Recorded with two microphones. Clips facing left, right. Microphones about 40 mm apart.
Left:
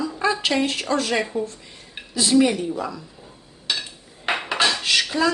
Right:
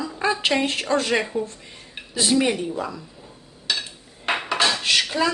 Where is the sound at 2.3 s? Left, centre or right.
Right.